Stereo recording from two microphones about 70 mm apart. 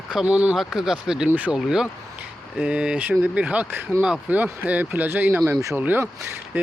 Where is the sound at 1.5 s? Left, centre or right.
Centre.